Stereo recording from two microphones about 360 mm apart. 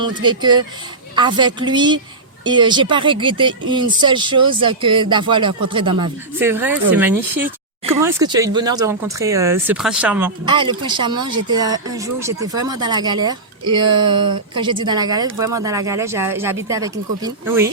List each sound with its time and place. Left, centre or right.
0.0 s speech: centre
14.2 s speech: right
14.5 s speech: centre